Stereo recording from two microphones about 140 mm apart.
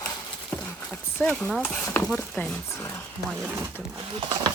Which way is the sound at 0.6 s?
15° left (ahead or behind).